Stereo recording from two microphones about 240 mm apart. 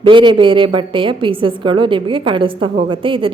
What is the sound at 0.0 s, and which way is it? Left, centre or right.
A woman's voice, centre.